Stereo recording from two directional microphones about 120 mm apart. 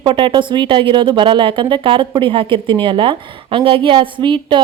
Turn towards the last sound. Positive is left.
turn(degrees=-40)  # may be behind; listen again after turning